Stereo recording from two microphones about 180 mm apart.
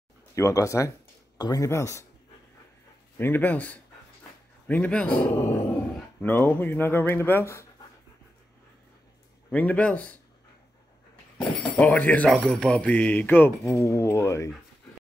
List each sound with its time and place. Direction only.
0.3 s speech: 15° left (ahead or behind)
3.2 s speech: 10° left (ahead or behind)
9.5 s speech: 10° left (ahead or behind)
11.3 s speech: 5° left (ahead or behind)